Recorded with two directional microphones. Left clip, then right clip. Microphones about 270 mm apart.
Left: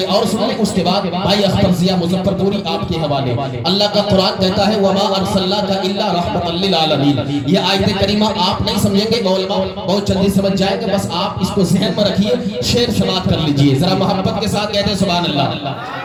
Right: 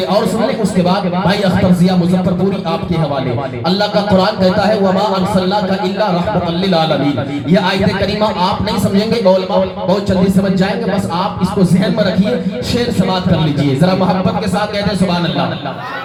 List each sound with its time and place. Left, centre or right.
3.8 s speech: right
7.5 s speech: right